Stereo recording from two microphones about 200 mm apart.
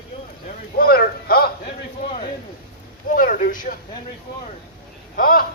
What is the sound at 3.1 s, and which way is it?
Speech, 40° left (ahead or behind).